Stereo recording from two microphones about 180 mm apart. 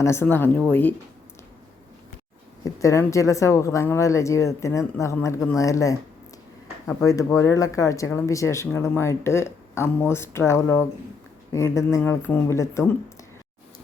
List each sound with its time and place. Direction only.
0.0 s speech: 15° left (ahead or behind)
2.8 s speech: 15° left (ahead or behind)